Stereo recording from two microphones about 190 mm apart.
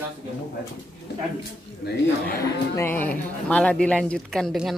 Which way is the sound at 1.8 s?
55° left (ahead or behind).